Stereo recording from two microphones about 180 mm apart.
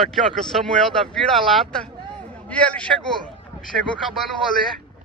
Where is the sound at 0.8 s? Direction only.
Centre (ahead or behind).